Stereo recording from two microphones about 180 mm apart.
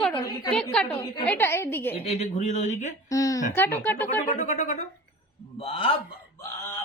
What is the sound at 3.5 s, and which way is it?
Speech, 10° left (ahead or behind).